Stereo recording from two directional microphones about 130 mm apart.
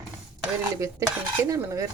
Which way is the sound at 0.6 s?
25° right (ahead or behind).